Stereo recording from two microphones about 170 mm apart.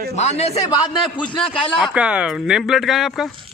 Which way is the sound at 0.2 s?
40° left (ahead or behind).